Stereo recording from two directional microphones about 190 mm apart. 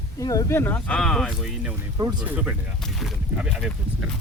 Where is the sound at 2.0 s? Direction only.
20° right (ahead or behind).